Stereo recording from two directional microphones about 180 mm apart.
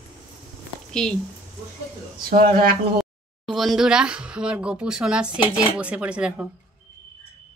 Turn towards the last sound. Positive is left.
turn(degrees=-5)  # may be behind; listen again after turning